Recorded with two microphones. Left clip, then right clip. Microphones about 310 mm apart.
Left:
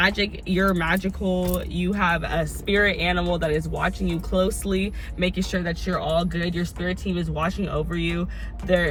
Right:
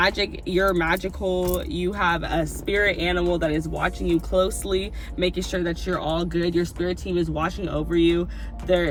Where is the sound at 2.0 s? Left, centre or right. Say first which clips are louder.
Even; centre.